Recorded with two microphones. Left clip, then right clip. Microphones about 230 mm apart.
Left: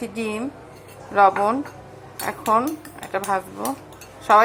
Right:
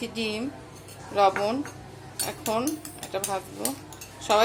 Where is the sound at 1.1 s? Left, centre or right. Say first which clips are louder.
Left 6 dB; centre.